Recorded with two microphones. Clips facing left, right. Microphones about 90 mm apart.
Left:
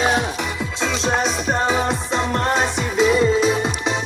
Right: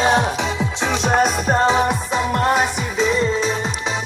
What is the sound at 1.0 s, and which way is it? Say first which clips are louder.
Music: right 4 dB; 50° right (ahead or behind).